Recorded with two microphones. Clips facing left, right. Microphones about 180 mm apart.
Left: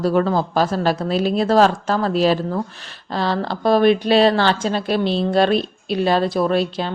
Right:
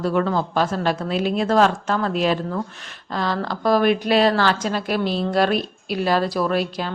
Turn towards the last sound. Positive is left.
turn(degrees=25)  # may be behind; listen again after turning